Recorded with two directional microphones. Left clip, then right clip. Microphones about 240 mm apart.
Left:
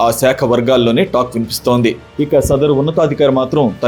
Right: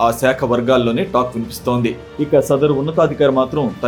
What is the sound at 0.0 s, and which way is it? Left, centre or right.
Speech, left.